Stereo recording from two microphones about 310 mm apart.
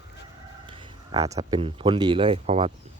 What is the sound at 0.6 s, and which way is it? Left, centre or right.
Speech, centre.